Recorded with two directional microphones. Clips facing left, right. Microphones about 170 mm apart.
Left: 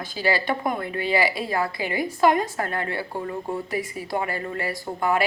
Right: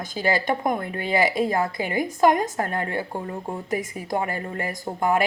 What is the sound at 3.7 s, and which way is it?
Speech, 45° right (ahead or behind).